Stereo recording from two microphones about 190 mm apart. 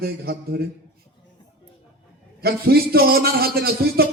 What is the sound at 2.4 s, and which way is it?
A man's voice, 55° right (ahead or behind).